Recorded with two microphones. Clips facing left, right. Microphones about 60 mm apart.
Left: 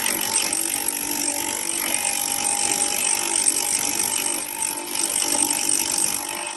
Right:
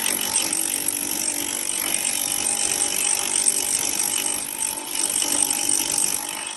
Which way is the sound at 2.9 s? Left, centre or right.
Left.